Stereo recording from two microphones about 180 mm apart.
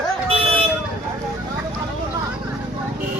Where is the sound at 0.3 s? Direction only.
30° right (ahead or behind).